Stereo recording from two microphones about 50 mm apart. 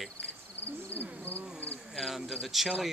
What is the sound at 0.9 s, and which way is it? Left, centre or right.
Speech, right.